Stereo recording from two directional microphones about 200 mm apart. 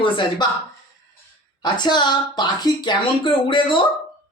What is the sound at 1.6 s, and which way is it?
Speech, 20° left (ahead or behind).